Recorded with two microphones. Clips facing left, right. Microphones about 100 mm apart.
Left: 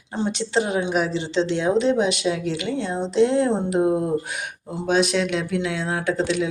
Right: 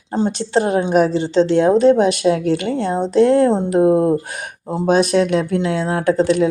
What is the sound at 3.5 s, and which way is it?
Speech, 35° right (ahead or behind).